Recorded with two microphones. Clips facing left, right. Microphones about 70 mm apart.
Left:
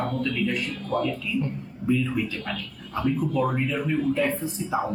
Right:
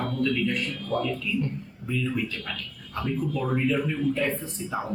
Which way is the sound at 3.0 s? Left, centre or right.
Left.